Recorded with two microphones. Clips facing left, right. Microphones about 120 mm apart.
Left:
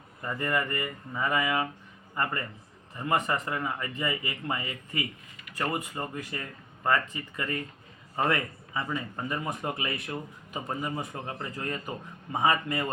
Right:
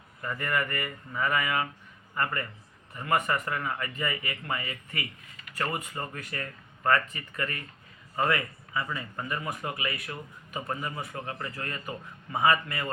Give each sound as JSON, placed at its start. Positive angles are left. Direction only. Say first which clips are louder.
{"t": 0.2, "sound": "speech", "louder": "left 1 dB", "side_deg": 25}